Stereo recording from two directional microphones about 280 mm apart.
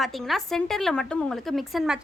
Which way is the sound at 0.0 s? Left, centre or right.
Centre.